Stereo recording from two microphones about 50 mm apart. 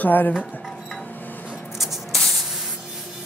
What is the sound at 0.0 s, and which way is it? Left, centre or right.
Speech, left.